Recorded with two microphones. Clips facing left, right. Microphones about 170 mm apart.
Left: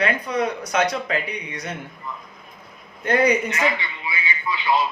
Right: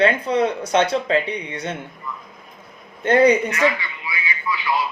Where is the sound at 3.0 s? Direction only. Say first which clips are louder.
Right 5 dB; 30° right (ahead or behind).